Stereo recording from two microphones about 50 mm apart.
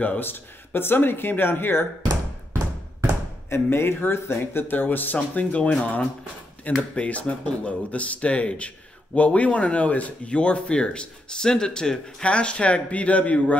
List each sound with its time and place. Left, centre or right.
0.2 s speech: left
3.4 s speech: left